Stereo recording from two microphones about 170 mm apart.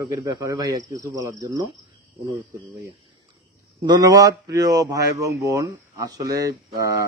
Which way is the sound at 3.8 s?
25° right (ahead or behind).